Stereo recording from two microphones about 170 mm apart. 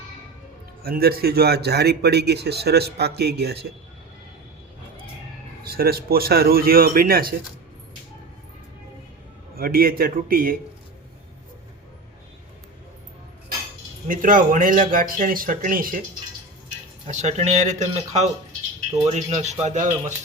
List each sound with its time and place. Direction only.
0.8 s a man's voice: 65° right (ahead or behind)
5.6 s speech: 65° right (ahead or behind)
9.6 s speech: 60° right (ahead or behind)
14.1 s speech: 50° right (ahead or behind)
17.1 s speech: 40° right (ahead or behind)